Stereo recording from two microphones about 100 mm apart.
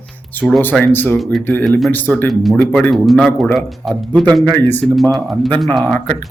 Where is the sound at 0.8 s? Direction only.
20° left (ahead or behind).